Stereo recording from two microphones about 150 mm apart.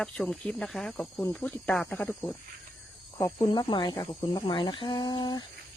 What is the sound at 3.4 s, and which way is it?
Speech, 30° left (ahead or behind).